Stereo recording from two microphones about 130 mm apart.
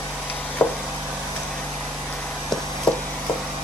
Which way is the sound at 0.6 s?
15° left (ahead or behind).